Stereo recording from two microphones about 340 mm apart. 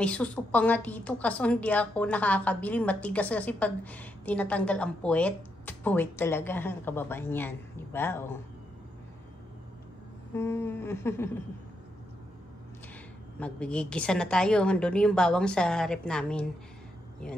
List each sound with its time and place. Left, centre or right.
0.0 s a woman's voice: centre
10.3 s humming: centre
13.4 s a woman's voice: centre